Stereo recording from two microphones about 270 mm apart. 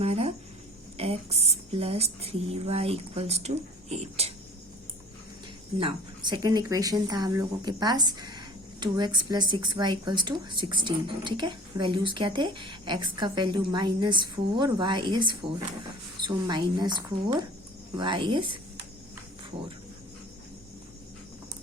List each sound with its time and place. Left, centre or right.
0.0 s a sound: right
0.9 s speech: right
5.8 s speech: centre